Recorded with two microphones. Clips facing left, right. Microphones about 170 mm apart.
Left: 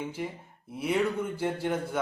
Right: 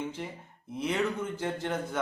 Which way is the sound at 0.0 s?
10° left (ahead or behind).